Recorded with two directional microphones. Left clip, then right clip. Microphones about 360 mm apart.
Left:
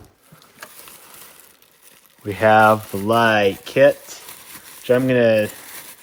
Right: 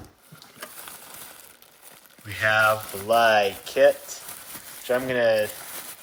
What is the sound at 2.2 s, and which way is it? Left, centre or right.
Speech, centre.